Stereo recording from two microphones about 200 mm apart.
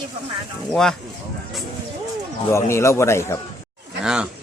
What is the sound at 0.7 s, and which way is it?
Speech, 5° left (ahead or behind).